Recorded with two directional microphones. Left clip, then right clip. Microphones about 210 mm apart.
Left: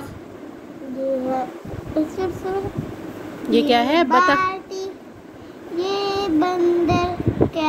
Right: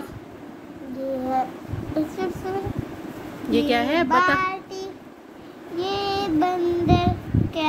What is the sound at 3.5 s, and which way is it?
Speech, 5° left (ahead or behind).